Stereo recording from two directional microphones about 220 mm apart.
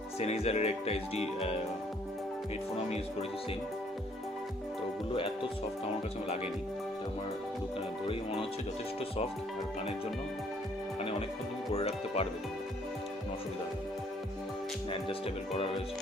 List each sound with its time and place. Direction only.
0.2 s speech: 30° left (ahead or behind)
2.7 s speech: 25° left (ahead or behind)
5.1 s speech: 25° left (ahead or behind)
8.0 s speech: 25° left (ahead or behind)
11.7 s speech: 25° left (ahead or behind)